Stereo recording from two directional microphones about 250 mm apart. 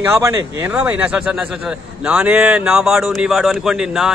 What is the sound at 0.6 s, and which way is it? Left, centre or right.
A man's voice, centre.